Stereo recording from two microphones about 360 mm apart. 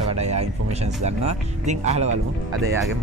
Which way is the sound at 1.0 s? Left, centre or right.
Centre.